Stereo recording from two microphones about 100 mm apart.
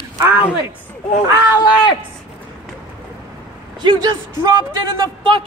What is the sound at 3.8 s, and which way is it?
Speech, 50° right (ahead or behind).